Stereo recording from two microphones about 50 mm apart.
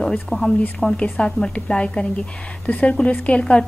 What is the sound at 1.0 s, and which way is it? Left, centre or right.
A woman's voice, left.